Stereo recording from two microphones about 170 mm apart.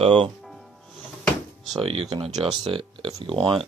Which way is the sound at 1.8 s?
30° right (ahead or behind).